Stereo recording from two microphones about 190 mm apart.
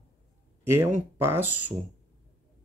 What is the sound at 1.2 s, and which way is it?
Speech, 10° right (ahead or behind).